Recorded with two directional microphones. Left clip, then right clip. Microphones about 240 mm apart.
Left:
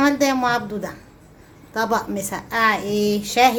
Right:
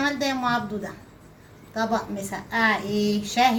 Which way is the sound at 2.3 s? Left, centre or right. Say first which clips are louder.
Left 3 dB; left.